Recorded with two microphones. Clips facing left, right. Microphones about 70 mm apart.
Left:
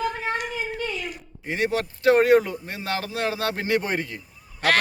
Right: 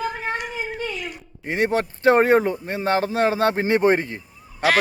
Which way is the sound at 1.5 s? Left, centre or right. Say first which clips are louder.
Right 3 dB; right.